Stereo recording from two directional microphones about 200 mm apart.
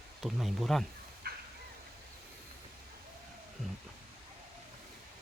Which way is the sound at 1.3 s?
50° right (ahead or behind).